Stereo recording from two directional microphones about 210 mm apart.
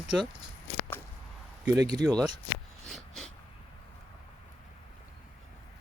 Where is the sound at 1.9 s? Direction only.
20° right (ahead or behind).